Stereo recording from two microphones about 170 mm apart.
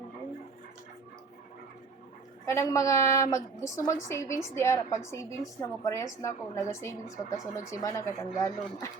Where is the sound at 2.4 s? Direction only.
20° left (ahead or behind).